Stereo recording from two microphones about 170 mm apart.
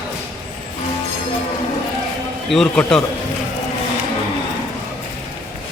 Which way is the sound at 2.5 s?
5° left (ahead or behind).